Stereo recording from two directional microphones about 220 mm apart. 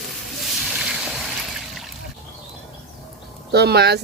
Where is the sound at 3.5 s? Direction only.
50° right (ahead or behind).